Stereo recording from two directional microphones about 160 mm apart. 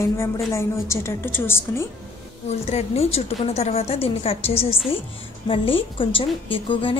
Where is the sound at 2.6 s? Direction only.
40° left (ahead or behind).